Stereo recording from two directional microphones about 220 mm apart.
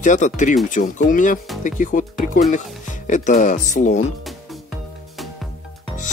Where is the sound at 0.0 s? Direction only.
35° left (ahead or behind).